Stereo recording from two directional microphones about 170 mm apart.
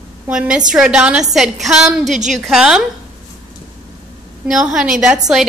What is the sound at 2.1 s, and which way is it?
Speech, 45° right (ahead or behind).